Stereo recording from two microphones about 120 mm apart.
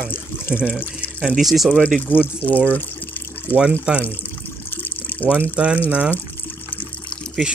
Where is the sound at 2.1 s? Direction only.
15° left (ahead or behind).